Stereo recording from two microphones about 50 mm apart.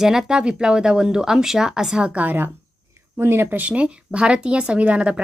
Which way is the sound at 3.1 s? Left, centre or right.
Right.